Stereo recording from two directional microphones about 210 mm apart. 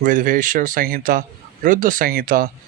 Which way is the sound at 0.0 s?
40° right (ahead or behind).